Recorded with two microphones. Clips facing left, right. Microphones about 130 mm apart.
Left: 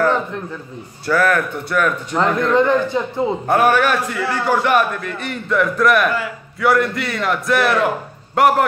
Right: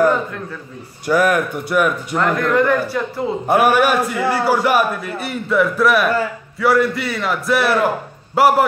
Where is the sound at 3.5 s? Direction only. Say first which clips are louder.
Right 2 dB; 10° right (ahead or behind).